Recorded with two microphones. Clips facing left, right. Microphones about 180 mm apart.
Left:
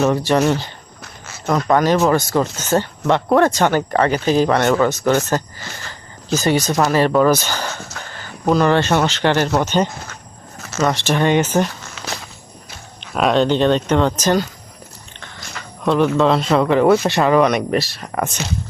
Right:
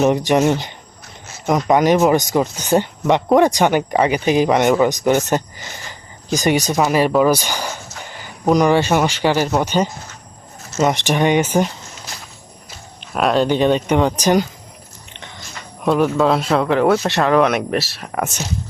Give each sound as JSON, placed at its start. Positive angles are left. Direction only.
{"t": 0.0, "sound": "speech", "side_deg": -15}
{"t": 11.9, "sound": "walk", "side_deg": 80}
{"t": 13.1, "sound": "speech", "side_deg": -5}
{"t": 15.8, "sound": "speech", "side_deg": -5}